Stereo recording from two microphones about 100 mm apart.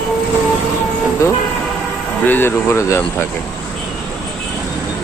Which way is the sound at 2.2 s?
20° left (ahead or behind).